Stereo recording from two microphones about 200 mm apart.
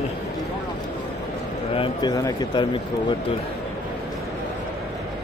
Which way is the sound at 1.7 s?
25° left (ahead or behind).